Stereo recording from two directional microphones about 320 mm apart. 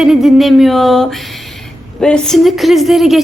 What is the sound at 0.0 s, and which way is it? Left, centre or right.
A woman's voice, centre.